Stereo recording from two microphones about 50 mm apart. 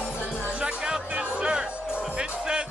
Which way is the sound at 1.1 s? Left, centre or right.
Right.